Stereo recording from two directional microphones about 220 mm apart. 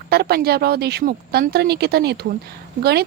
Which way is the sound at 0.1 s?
45° right (ahead or behind).